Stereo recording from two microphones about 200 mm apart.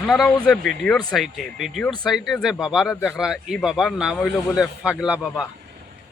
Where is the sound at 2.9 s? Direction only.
10° left (ahead or behind).